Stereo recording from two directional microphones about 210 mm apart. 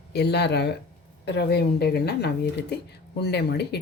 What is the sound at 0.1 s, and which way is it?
Speech, 50° left (ahead or behind).